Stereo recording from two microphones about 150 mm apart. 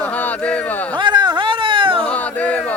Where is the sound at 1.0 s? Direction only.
30° right (ahead or behind).